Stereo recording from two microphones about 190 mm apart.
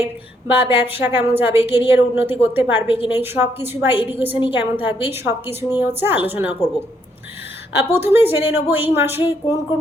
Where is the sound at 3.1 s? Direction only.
10° right (ahead or behind).